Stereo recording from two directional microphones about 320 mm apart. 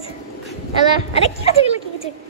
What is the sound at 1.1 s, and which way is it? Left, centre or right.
Speech, centre.